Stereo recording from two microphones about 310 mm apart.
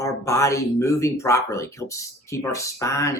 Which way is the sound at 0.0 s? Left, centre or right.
Centre.